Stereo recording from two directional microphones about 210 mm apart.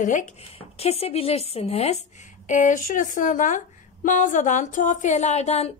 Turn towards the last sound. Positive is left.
turn(degrees=30)  # may be behind; listen again after turning